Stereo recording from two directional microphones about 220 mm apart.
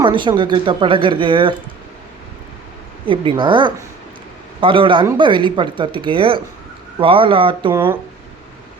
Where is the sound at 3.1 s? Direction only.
20° right (ahead or behind).